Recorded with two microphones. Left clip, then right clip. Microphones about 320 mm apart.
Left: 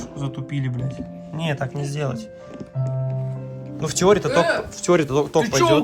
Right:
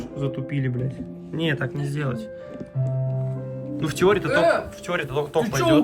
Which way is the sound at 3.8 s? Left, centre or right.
Centre.